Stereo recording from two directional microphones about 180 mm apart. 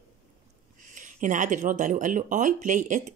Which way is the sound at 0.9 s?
45° right (ahead or behind).